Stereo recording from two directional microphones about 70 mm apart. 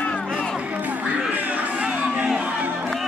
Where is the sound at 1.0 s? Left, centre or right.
Centre.